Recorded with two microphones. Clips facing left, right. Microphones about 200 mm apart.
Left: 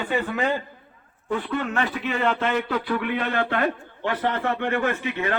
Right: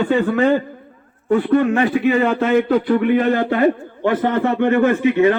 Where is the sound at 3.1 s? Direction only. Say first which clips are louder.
Right 9 dB; 45° right (ahead or behind).